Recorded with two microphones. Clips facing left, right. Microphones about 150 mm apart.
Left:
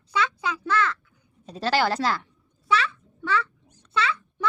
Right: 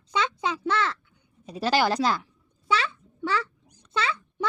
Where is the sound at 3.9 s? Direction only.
30° right (ahead or behind).